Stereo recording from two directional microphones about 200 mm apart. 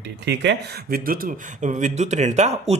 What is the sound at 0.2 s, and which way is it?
Speech, 60° right (ahead or behind).